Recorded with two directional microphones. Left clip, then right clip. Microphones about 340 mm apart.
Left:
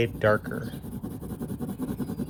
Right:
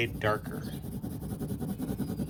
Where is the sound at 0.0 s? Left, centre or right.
Centre.